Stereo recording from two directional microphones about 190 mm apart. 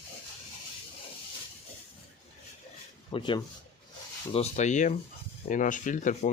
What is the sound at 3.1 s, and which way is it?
Speech, 25° left (ahead or behind).